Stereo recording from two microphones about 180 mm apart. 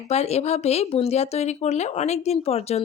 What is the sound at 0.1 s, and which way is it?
A woman's voice, 35° left (ahead or behind).